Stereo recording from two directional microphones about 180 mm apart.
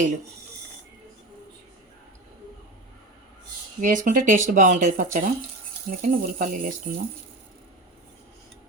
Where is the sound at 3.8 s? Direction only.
45° right (ahead or behind).